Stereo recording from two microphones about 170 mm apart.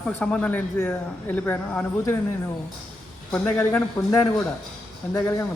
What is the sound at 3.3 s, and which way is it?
Speech, 10° left (ahead or behind).